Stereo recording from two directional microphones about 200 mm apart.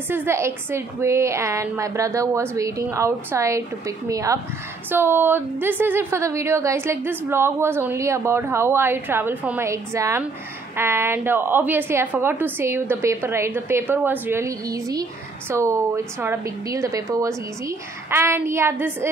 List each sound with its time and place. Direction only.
0.1 s a woman's voice: 10° right (ahead or behind)